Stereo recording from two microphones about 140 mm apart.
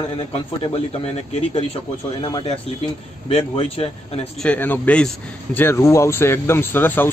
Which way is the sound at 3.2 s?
40° left (ahead or behind).